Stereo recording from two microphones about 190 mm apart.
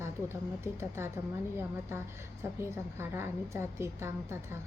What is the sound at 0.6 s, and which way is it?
Speech, 15° right (ahead or behind).